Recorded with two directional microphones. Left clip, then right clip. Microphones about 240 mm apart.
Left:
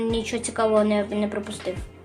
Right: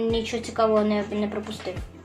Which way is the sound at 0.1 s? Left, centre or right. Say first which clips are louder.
Even; left.